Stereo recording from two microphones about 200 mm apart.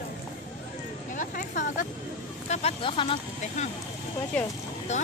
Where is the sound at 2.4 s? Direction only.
35° left (ahead or behind).